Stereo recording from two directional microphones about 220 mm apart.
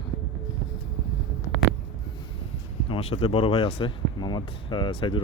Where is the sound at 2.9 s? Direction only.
25° left (ahead or behind).